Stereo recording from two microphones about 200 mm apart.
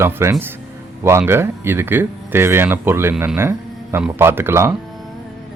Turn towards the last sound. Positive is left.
turn(degrees=-10)  # may be behind; listen again after turning